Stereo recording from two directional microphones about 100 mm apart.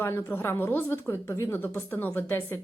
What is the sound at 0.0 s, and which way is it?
A woman's voice, 25° left (ahead or behind).